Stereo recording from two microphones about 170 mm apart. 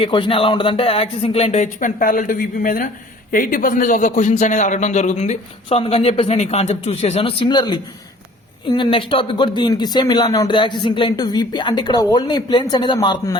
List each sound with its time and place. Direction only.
0.0 s a man's voice: 30° left (ahead or behind)